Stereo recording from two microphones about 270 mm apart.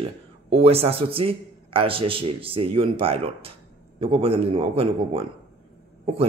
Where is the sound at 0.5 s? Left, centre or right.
Right.